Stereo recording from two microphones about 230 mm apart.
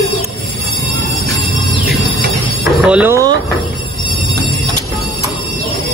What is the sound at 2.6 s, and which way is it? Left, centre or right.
Speech, centre.